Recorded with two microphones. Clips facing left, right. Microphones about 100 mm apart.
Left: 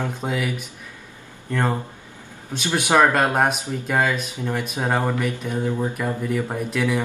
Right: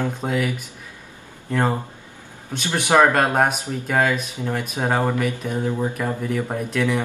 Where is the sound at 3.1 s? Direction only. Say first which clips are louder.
Right 1 dB; centre (ahead or behind).